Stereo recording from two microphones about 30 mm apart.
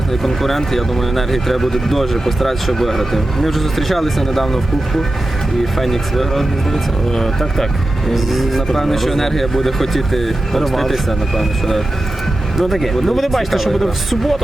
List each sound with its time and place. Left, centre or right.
0.2 s speech: centre
5.7 s speech: centre
8.1 s speech: centre